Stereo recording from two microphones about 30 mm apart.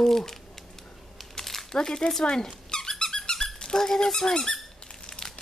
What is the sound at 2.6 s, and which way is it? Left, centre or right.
Squeak, left.